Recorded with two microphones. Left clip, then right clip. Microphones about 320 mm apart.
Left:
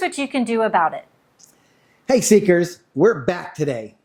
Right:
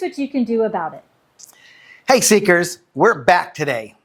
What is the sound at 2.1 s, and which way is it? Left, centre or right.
Speech, right.